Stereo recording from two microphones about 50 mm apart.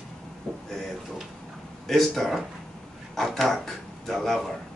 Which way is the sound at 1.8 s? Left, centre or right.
Centre.